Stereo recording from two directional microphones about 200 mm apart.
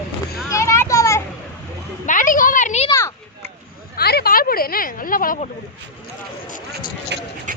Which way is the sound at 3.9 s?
50° left (ahead or behind).